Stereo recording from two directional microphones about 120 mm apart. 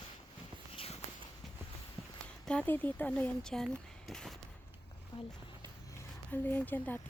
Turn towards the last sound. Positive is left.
turn(degrees=15)  # may be behind; listen again after turning